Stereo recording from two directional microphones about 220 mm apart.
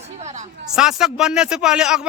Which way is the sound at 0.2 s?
30° right (ahead or behind).